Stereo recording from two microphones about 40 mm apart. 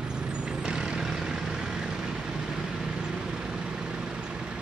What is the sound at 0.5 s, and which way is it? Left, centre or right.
Vehicle, right.